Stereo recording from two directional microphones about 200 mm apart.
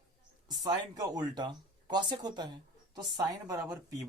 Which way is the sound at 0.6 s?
20° right (ahead or behind).